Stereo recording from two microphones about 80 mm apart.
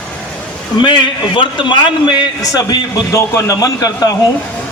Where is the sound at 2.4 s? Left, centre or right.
Left.